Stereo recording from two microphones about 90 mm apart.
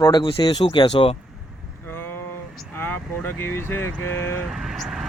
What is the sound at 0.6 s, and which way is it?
Speech, 75° left (ahead or behind).